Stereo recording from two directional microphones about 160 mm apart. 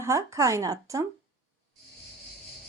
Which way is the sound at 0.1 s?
20° right (ahead or behind).